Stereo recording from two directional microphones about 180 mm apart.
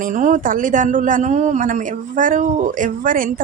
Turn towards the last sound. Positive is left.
turn(degrees=-50)  # may be behind; listen again after turning